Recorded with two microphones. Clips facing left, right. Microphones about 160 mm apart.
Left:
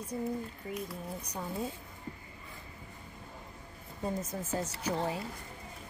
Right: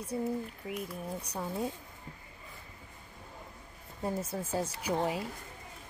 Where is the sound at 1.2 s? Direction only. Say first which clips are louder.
Right 2 dB; 10° right (ahead or behind).